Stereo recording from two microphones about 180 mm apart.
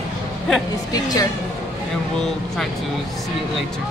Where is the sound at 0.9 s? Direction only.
20° left (ahead or behind).